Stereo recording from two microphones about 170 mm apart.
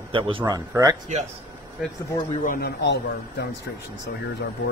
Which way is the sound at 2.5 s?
65° left (ahead or behind).